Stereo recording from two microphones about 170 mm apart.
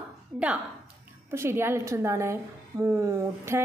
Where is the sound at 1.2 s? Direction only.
15° right (ahead or behind).